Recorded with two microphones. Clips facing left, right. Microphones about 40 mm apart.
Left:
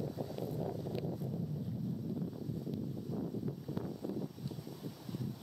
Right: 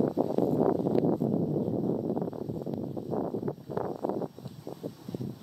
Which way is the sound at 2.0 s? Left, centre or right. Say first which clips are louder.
Right 9 dB; right.